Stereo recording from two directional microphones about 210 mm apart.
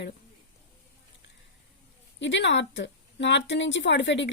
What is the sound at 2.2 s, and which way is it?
Speech, 55° left (ahead or behind).